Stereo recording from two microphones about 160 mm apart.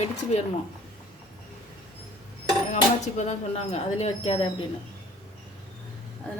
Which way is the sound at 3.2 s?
45° left (ahead or behind).